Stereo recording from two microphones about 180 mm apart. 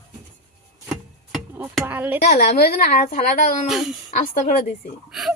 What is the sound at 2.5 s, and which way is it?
Speech, 60° left (ahead or behind).